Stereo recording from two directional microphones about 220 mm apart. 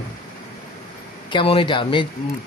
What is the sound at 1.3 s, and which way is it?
Speech, 25° left (ahead or behind).